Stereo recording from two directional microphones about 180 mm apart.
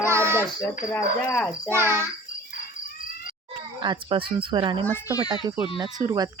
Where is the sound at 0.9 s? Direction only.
15° left (ahead or behind).